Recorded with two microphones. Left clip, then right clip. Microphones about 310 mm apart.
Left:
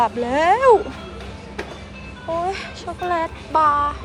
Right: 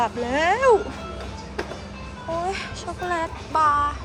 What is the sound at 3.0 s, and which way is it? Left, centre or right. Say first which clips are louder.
Speech: left 4 dB; centre.